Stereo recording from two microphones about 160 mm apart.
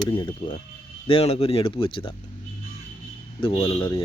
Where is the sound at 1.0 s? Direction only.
35° left (ahead or behind).